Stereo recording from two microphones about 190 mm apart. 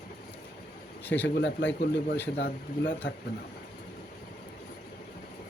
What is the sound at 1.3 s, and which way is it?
Speech, 65° left (ahead or behind).